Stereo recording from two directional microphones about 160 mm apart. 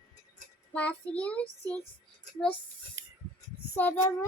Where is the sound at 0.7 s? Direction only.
10° left (ahead or behind).